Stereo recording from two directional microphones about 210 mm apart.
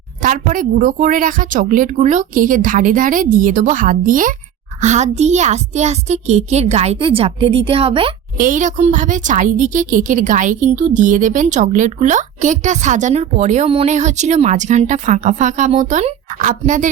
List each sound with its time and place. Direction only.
0.2 s a woman's voice: 40° right (ahead or behind)
8.4 s a woman's voice: 40° right (ahead or behind)